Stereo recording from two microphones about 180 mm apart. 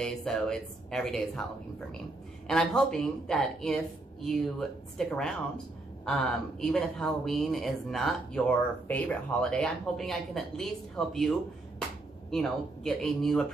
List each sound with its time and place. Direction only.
0.0 s speech: 5° left (ahead or behind)
2.4 s speech: 5° left (ahead or behind)